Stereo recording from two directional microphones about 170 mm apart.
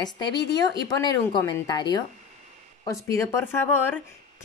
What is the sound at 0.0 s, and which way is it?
Speech, 25° left (ahead or behind).